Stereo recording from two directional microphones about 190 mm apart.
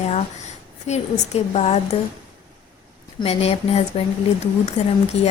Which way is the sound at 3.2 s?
30° left (ahead or behind).